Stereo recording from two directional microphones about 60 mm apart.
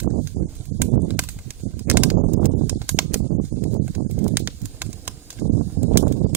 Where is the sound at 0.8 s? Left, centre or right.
Right.